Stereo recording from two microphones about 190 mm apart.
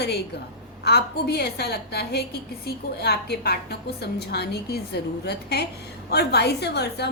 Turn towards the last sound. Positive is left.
turn(degrees=60)  # may be behind; listen again after turning